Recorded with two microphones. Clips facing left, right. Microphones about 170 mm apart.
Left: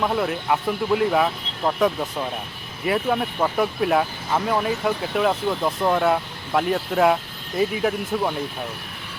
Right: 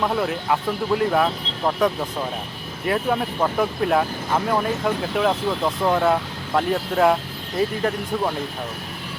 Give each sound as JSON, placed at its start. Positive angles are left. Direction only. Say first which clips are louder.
{"t": 0.0, "sound": "speech", "louder": "even", "side_deg": 0}